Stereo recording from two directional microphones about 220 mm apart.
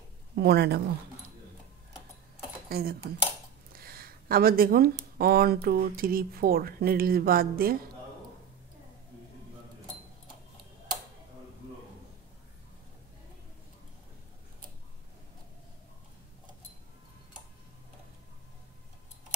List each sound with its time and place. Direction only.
0.4 s speech: 45° right (ahead or behind)
2.7 s speech: 45° right (ahead or behind)